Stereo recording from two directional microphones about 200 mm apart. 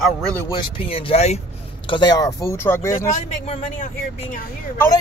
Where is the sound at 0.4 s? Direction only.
20° left (ahead or behind).